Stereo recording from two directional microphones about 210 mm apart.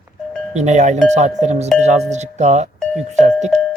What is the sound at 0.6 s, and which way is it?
Speech, 35° right (ahead or behind).